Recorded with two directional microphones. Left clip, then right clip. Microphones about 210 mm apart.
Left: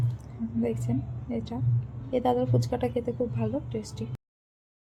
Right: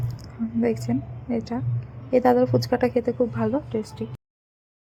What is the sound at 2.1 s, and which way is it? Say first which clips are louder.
Speech: right 7 dB; 20° right (ahead or behind).